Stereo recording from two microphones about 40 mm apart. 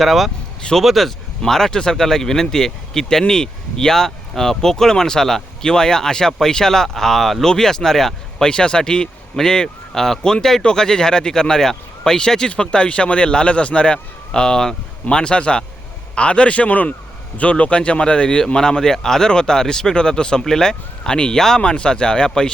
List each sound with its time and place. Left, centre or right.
0.0 s speech: centre
8.4 s a man's voice: left